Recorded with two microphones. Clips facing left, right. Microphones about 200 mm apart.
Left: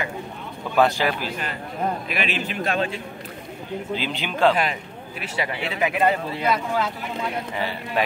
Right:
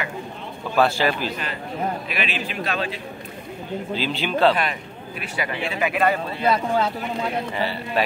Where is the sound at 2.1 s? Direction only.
45° left (ahead or behind).